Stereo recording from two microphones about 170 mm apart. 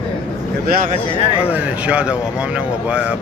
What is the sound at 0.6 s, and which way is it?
Speech, 60° right (ahead or behind).